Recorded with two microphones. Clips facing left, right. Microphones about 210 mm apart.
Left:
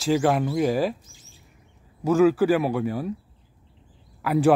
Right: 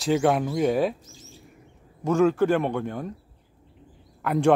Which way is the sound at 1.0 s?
40° right (ahead or behind).